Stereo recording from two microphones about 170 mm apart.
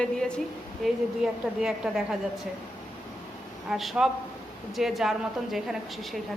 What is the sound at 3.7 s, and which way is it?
A woman's voice, centre (ahead or behind).